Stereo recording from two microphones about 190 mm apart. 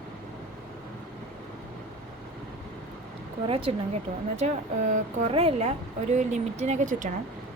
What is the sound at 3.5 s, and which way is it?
Speech, 30° right (ahead or behind).